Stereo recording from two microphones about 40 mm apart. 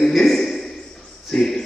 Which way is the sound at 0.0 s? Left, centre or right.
Centre.